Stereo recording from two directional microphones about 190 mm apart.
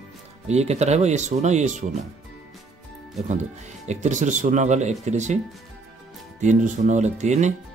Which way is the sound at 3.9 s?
40° right (ahead or behind).